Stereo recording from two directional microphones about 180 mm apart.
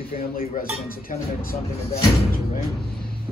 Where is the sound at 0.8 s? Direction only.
55° left (ahead or behind).